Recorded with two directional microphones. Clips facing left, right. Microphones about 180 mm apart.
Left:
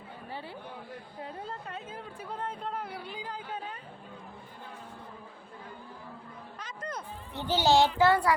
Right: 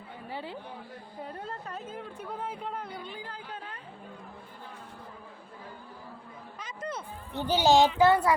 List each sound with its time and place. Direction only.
0.3 s chatter: 15° right (ahead or behind)
1.2 s a sound: centre (ahead or behind)
2.4 s a child's voice: 5° right (ahead or behind)
2.7 s speech: 5° left (ahead or behind)
3.2 s speech: 15° left (ahead or behind)
6.6 s music: 5° right (ahead or behind)
7.3 s a child's voice: 15° right (ahead or behind)